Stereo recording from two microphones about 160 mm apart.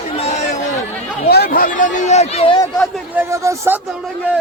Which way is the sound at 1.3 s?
75° left (ahead or behind).